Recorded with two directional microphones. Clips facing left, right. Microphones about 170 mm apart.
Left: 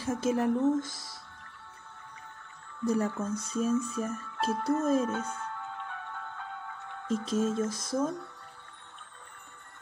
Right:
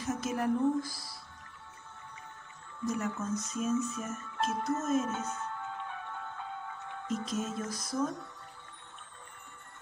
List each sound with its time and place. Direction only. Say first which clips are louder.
0.0 s speech: left 4 dB; 30° left (ahead or behind)
2.8 s speech: left 5 dB; 30° left (ahead or behind)
7.1 s speech: left 6 dB; 30° left (ahead or behind)